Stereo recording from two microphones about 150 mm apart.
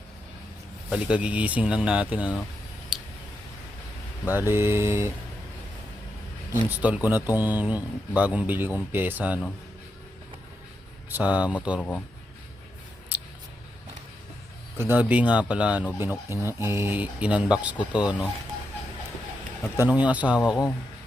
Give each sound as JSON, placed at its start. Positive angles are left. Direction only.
{"t": 0.9, "sound": "speech", "side_deg": -5}
{"t": 2.9, "sound": "a sound", "side_deg": -5}
{"t": 4.3, "sound": "speech", "side_deg": -15}
{"t": 6.5, "sound": "speech", "side_deg": -10}
{"t": 11.1, "sound": "speech", "side_deg": -10}
{"t": 11.8, "sound": "speech", "side_deg": 10}
{"t": 13.1, "sound": "scissors", "side_deg": -10}
{"t": 14.8, "sound": "speech", "side_deg": -10}
{"t": 19.9, "sound": "speech", "side_deg": -10}